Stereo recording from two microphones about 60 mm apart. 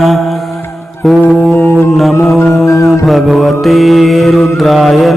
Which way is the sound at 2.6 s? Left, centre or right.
Left.